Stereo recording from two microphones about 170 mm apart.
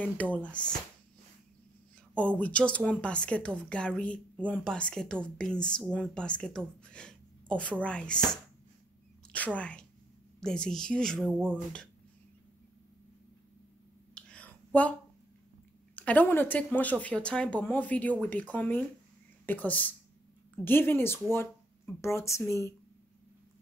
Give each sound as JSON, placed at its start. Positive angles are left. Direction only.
{"t": 0.0, "sound": "speech", "side_deg": 10}
{"t": 2.1, "sound": "speech", "side_deg": 10}
{"t": 9.3, "sound": "speech", "side_deg": 10}
{"t": 14.1, "sound": "a sound", "side_deg": 5}
{"t": 16.0, "sound": "speech", "side_deg": 10}